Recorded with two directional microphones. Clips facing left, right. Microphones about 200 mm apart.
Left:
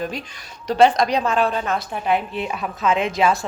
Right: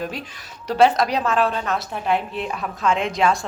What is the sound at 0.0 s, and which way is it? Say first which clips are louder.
A woman's voice: left 1 dB; 5° right (ahead or behind).